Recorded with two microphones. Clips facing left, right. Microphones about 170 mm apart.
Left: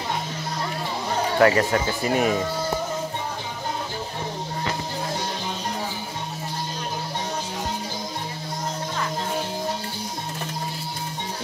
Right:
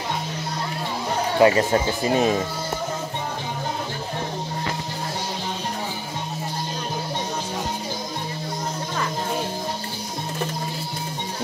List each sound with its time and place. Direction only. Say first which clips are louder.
1.4 s speech: right 2 dB; 20° right (ahead or behind)